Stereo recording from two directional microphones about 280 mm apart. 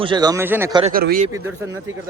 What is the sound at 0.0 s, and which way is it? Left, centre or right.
Speech, centre.